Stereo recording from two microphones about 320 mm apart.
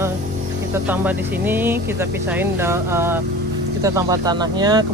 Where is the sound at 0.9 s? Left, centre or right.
Centre.